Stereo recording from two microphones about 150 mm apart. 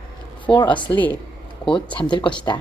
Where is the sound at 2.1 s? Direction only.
30° left (ahead or behind).